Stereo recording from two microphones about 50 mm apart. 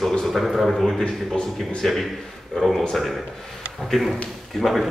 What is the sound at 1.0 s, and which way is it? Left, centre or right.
Speech, centre.